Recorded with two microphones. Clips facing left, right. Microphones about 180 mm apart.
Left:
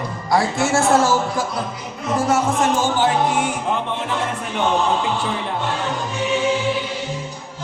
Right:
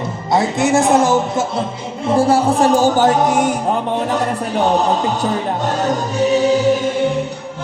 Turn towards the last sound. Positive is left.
turn(degrees=-50)  # may be behind; listen again after turning